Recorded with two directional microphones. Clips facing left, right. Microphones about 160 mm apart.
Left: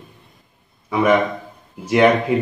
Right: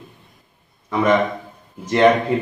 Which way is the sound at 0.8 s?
10° left (ahead or behind).